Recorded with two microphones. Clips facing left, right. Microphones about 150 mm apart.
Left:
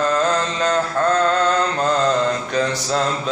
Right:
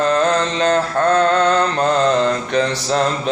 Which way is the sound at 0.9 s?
65° right (ahead or behind).